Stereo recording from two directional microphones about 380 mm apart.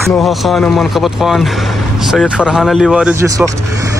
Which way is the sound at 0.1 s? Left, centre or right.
Centre.